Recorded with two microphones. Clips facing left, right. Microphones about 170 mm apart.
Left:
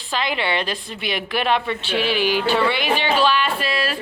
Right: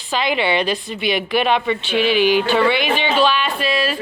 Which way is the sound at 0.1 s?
5° right (ahead or behind).